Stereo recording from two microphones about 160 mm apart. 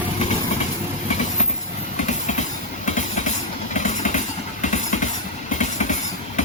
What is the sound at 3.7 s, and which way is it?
Vehicle, 50° left (ahead or behind).